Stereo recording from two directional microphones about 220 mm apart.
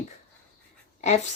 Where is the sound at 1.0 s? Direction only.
30° left (ahead or behind).